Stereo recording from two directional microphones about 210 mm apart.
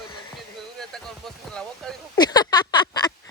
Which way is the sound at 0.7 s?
Centre (ahead or behind).